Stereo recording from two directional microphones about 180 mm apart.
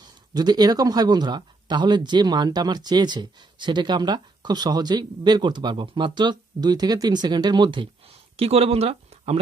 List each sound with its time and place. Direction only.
0.0 s speech: 20° right (ahead or behind)